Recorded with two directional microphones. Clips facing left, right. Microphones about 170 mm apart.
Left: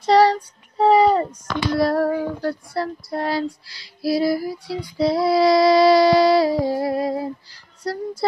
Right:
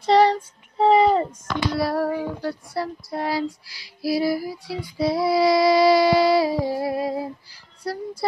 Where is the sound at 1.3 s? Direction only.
5° right (ahead or behind).